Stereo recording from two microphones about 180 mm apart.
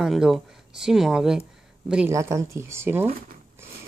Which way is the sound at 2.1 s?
15° right (ahead or behind).